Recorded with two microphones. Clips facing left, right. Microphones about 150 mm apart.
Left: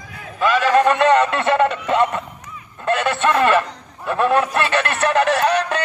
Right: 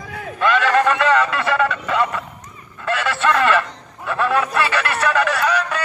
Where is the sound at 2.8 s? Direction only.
20° left (ahead or behind).